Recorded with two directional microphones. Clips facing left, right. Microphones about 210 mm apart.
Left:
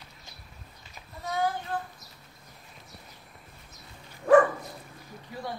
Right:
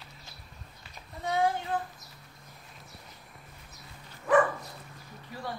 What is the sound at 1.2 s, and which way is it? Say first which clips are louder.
Child singing: right 2 dB; 30° right (ahead or behind).